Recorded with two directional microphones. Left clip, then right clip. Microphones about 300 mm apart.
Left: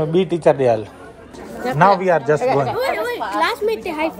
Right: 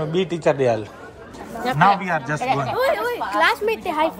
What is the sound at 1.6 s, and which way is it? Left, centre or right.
Speech, right.